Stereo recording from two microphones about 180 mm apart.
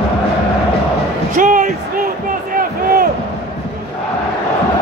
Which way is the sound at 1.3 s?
45° right (ahead or behind).